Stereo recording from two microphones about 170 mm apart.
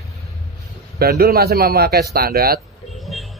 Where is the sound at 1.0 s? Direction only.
65° right (ahead or behind).